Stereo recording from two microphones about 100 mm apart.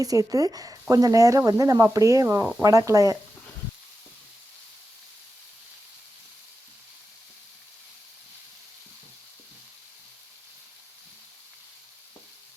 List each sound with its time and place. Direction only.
0.0 s speech: 35° right (ahead or behind)